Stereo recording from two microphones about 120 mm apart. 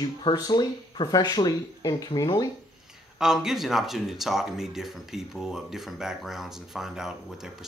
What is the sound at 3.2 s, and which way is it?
Speech, 5° right (ahead or behind).